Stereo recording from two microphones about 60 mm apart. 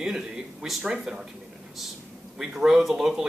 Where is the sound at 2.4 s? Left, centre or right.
Centre.